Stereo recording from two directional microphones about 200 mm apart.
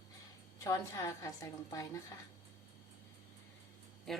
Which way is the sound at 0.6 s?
15° left (ahead or behind).